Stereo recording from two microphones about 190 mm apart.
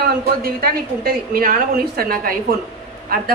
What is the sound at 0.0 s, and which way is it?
A woman's voice, 50° right (ahead or behind).